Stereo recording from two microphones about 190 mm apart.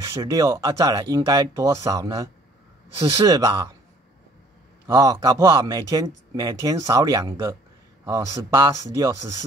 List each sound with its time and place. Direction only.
0.0 s speech: 20° right (ahead or behind)
4.8 s speech: 20° right (ahead or behind)